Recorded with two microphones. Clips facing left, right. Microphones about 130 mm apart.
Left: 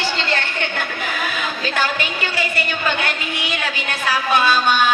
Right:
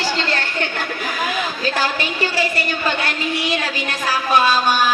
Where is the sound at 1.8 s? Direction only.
35° right (ahead or behind).